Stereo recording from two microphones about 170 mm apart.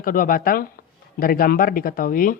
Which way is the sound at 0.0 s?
55° left (ahead or behind).